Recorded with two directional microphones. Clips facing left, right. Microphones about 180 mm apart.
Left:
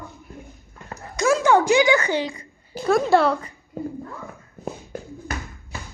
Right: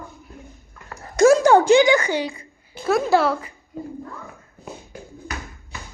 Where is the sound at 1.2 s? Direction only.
40° right (ahead or behind).